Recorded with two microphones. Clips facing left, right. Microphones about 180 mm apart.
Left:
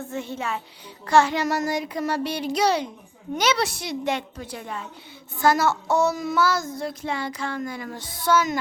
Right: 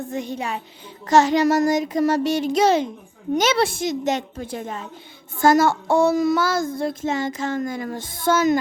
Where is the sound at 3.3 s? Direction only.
50° right (ahead or behind).